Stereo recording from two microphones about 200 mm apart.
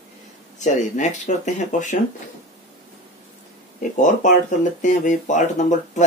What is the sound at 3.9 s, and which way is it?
Speech, 40° left (ahead or behind).